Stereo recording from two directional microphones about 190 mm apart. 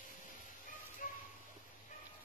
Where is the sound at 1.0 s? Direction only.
45° left (ahead or behind).